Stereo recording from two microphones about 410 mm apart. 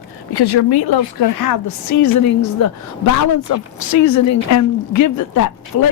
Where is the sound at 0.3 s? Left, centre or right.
Left.